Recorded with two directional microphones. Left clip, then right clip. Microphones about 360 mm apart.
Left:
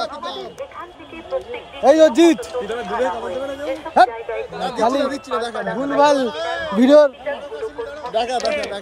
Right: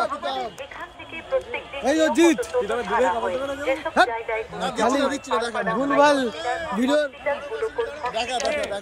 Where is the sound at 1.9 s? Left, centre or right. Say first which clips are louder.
Left 7 dB; centre.